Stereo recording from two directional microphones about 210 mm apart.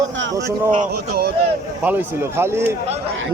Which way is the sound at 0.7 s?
45° right (ahead or behind).